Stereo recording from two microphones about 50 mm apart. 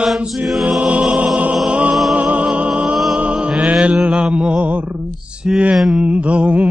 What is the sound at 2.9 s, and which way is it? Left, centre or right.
Music, centre.